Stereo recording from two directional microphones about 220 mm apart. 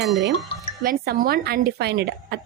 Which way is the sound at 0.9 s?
40° right (ahead or behind).